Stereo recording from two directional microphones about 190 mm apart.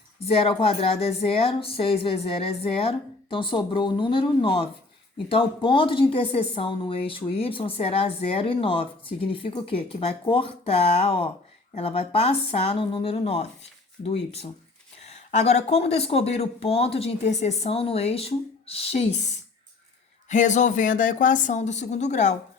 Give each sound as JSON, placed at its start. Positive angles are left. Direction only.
{"t": 0.3, "sound": "speech", "side_deg": 30}
{"t": 20.3, "sound": "speech", "side_deg": 40}